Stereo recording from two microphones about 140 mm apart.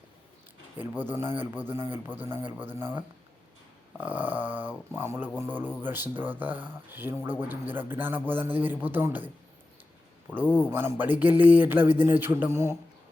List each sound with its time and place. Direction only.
0.8 s speech: 15° right (ahead or behind)
10.5 s speech: 15° right (ahead or behind)